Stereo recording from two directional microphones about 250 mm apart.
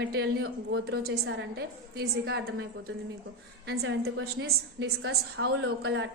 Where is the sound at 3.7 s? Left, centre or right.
Right.